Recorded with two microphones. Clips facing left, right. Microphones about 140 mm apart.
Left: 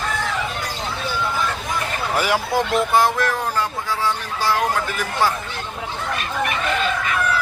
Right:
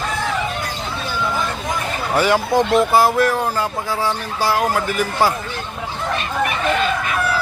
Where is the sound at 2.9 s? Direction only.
10° right (ahead or behind).